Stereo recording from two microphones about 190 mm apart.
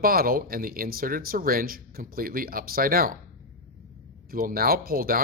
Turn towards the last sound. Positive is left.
turn(degrees=-50)  # may be behind; listen again after turning